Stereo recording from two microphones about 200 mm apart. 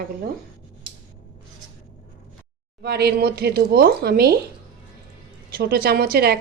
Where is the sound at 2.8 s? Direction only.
55° right (ahead or behind).